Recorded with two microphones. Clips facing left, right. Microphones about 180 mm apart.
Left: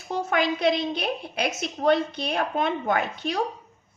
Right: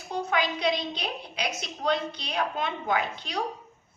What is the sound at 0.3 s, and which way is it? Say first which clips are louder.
A woman's voice: left 4 dB; 50° left (ahead or behind).